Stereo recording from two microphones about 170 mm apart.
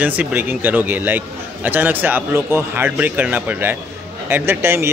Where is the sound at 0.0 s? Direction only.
10° right (ahead or behind).